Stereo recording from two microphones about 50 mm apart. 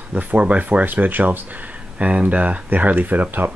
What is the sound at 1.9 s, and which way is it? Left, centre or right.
Speech, right.